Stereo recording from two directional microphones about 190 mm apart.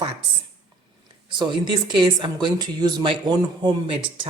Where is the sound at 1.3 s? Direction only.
25° right (ahead or behind).